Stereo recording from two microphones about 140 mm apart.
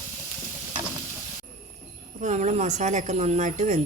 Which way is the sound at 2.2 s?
60° right (ahead or behind).